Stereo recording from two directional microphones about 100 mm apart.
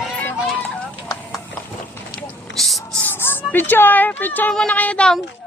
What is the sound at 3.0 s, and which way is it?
Speech, 20° left (ahead or behind).